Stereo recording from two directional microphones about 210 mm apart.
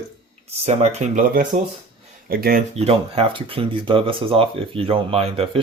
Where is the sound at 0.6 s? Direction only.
30° right (ahead or behind).